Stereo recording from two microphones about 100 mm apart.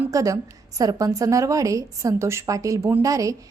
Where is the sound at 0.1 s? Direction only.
35° right (ahead or behind).